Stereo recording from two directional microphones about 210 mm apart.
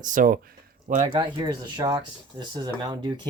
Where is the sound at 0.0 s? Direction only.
40° right (ahead or behind).